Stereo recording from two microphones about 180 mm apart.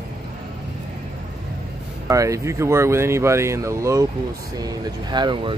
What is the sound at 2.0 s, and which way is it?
Speech, 15° right (ahead or behind).